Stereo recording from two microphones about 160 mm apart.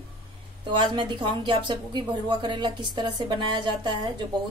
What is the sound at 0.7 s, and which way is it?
Speech, 30° right (ahead or behind).